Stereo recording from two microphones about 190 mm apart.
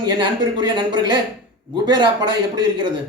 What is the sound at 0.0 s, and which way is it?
A man's voice, 25° right (ahead or behind).